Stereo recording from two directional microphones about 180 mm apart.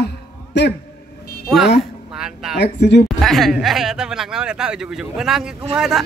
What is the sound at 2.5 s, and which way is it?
Speech, 70° left (ahead or behind).